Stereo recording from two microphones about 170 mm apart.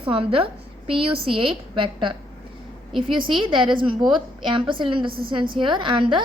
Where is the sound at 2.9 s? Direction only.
Centre (ahead or behind).